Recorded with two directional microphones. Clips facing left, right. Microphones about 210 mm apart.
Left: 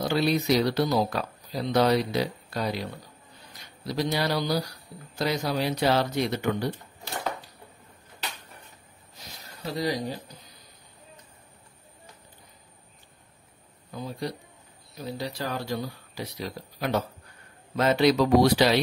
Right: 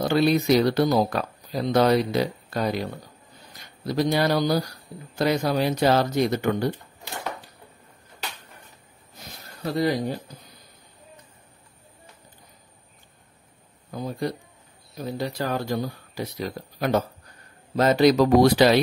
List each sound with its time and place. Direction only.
0.0 s speech: 55° right (ahead or behind)
9.7 s speech: 55° right (ahead or behind)
13.9 s speech: 50° right (ahead or behind)